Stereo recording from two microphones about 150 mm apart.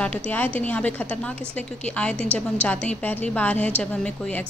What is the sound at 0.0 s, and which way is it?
A woman's voice, 10° left (ahead or behind).